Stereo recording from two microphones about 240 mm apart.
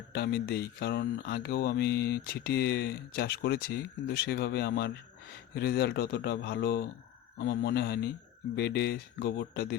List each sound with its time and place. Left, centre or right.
0.1 s speech: left